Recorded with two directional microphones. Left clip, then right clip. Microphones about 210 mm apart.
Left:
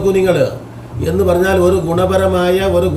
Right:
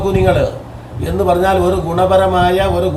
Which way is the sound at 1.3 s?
Centre (ahead or behind).